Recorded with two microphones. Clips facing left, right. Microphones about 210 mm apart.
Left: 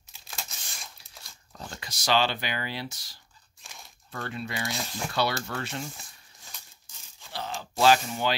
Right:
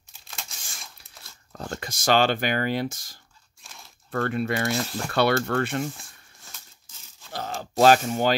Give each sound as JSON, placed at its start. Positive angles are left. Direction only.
{"t": 0.3, "sound": "tearing", "side_deg": 0}
{"t": 1.5, "sound": "speech", "side_deg": -50}
{"t": 3.6, "sound": "crunch", "side_deg": 0}
{"t": 4.1, "sound": "speech", "side_deg": -55}
{"t": 6.5, "sound": "a sound", "side_deg": 0}
{"t": 7.3, "sound": "speech", "side_deg": -45}